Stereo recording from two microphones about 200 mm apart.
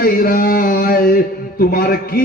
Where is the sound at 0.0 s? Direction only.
45° left (ahead or behind).